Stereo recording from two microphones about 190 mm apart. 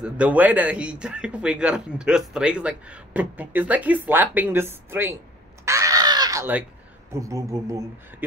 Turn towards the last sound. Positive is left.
turn(degrees=-15)  # may be behind; listen again after turning